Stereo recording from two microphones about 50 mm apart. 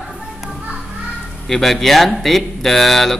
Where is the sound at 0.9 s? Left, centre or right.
Centre.